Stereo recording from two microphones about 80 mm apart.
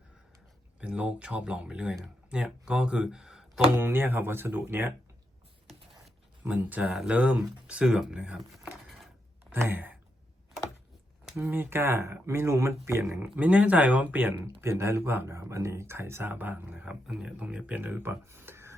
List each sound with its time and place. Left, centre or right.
0.8 s speech: centre
3.8 s speech: right
6.4 s speech: right
9.5 s speech: right
11.3 s speech: right